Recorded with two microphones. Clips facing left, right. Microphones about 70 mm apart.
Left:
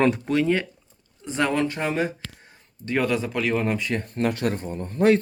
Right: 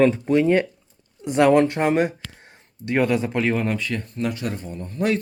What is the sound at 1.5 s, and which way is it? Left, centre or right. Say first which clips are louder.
Speech: right 7 dB; right.